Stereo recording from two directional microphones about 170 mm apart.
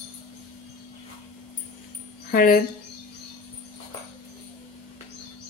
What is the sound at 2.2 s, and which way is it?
Speech, 55° left (ahead or behind).